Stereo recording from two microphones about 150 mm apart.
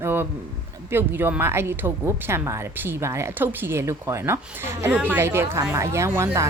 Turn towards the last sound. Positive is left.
turn(degrees=-20)  # may be behind; listen again after turning